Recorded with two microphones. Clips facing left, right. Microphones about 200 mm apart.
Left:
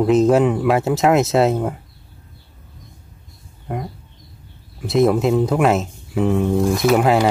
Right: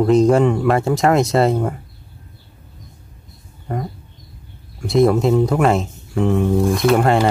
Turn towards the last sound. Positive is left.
turn(degrees=5)  # may be behind; listen again after turning